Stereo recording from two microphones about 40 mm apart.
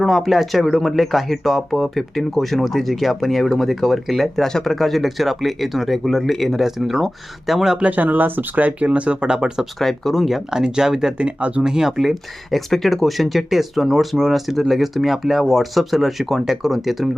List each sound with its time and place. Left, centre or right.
0.0 s speech: centre
4.4 s speech: centre
7.8 s speech: right
8.0 s speech: right; by 9.6 s centre
9.7 s speech: centre
10.5 s speech: centre
11.2 s speech: right
11.6 s speech: centre
11.9 s speech: centre